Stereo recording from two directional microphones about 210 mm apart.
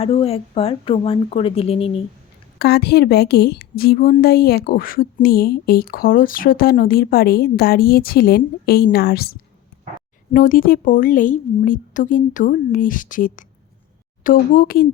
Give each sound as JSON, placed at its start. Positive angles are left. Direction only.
{"t": 0.0, "sound": "a woman's voice", "side_deg": 25}
{"t": 2.6, "sound": "a woman's voice", "side_deg": 50}
{"t": 10.3, "sound": "a woman's voice", "side_deg": 40}